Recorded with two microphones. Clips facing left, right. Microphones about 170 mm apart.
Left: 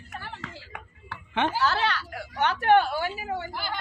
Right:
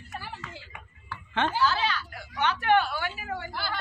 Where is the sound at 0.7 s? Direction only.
75° left (ahead or behind).